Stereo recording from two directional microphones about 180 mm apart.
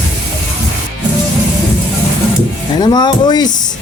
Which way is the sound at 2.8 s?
25° left (ahead or behind).